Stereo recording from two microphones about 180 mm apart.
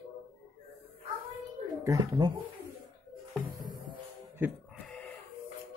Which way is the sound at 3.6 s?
25° right (ahead or behind).